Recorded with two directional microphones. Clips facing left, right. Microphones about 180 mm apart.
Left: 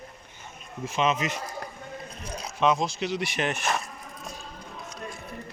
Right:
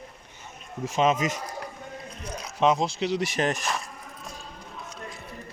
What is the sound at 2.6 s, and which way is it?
Speech, 30° right (ahead or behind).